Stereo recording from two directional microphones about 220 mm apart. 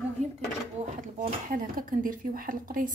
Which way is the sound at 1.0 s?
35° right (ahead or behind).